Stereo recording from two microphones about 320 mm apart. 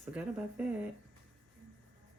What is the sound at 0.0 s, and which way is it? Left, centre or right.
Speech, centre.